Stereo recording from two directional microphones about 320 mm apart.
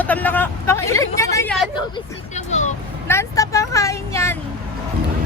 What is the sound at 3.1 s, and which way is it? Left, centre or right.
Vehicle, centre.